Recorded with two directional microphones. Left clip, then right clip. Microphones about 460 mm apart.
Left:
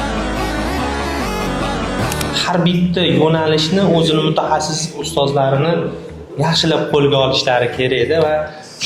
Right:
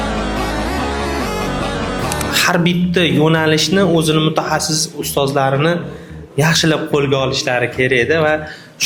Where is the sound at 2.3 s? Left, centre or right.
Right.